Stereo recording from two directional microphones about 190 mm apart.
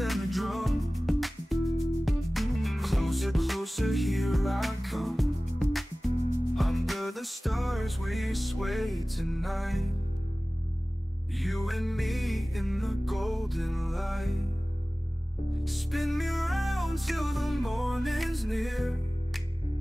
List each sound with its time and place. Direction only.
0.0 s music: centre (ahead or behind)
11.3 s music: centre (ahead or behind)
15.5 s music: centre (ahead or behind)